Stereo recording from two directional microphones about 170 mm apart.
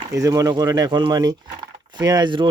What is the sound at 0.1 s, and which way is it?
Speech, 20° right (ahead or behind).